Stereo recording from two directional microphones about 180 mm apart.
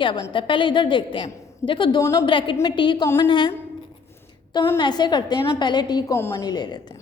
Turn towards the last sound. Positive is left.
turn(degrees=25)  # may be behind; listen again after turning